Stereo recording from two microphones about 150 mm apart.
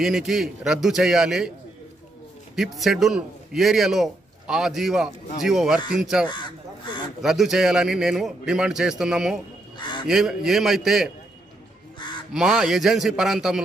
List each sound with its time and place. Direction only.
0.0 s a man's voice: centre (ahead or behind)
2.5 s a man's voice: centre (ahead or behind)
9.8 s crow: 30° left (ahead or behind)
10.0 s a man's voice: 5° right (ahead or behind)
12.3 s a man's voice: 5° right (ahead or behind)